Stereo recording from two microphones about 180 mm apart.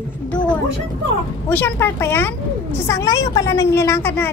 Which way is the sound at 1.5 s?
10° left (ahead or behind).